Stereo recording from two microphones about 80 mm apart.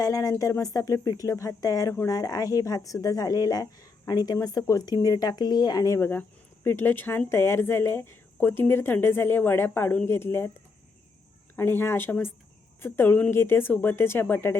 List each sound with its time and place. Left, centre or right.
0.0 s speech: left
6.0 s speech: left
11.5 s speech: left